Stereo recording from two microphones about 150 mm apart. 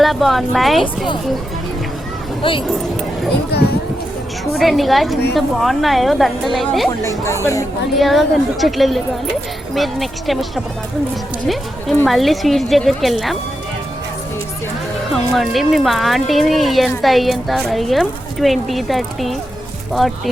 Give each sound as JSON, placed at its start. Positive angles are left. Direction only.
{"t": 0.0, "sound": "a woman's voice", "side_deg": 0}
{"t": 2.4, "sound": "speech", "side_deg": 35}
{"t": 3.5, "sound": "speech", "side_deg": 90}
{"t": 4.6, "sound": "a woman's voice", "side_deg": 0}
{"t": 7.3, "sound": "speech", "side_deg": 20}
{"t": 7.9, "sound": "a woman's voice", "side_deg": 0}
{"t": 12.0, "sound": "a woman's voice", "side_deg": 0}
{"t": 15.1, "sound": "a woman's voice", "side_deg": 0}